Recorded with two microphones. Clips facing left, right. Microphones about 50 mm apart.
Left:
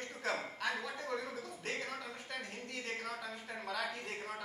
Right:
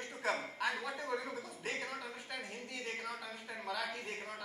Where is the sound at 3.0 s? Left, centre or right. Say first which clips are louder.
Left 1 dB; centre.